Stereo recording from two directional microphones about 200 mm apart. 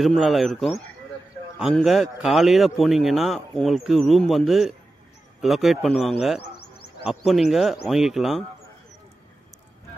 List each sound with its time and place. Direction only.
0.0 s speech: centre (ahead or behind)
6.5 s a sound: 55° left (ahead or behind)
7.1 s speech: centre (ahead or behind)